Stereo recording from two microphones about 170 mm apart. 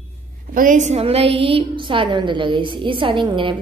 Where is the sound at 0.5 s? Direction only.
50° right (ahead or behind); by 3.5 s 30° right (ahead or behind).